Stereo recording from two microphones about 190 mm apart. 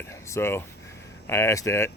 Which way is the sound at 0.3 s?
15° left (ahead or behind).